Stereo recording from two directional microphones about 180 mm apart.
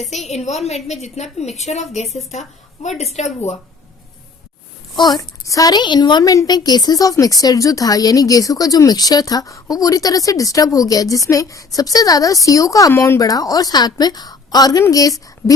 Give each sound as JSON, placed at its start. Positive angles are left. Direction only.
{"t": 0.0, "sound": "a woman's voice", "side_deg": 40}
{"t": 4.9, "sound": "a woman's voice", "side_deg": 25}